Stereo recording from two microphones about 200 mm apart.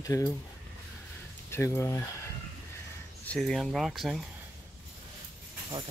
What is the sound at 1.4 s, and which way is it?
Speech, 15° left (ahead or behind).